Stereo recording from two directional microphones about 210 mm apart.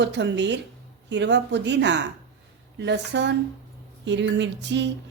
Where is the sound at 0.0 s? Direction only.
55° right (ahead or behind).